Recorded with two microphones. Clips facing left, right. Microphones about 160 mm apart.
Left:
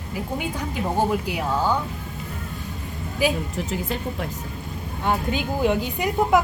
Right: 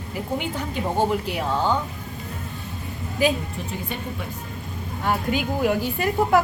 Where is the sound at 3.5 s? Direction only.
90° left.